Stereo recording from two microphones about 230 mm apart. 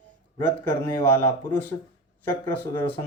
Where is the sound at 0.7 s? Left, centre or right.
Centre.